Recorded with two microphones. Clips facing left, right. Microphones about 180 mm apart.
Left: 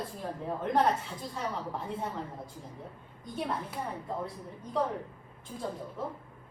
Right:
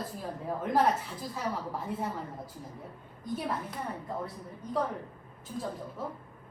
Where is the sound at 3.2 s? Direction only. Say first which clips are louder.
Right 1 dB; 5° right (ahead or behind).